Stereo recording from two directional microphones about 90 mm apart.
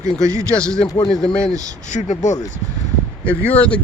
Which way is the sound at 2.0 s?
65° left (ahead or behind).